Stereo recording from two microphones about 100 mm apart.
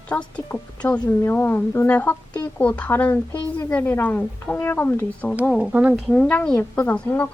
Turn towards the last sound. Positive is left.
turn(degrees=20)  # may be behind; listen again after turning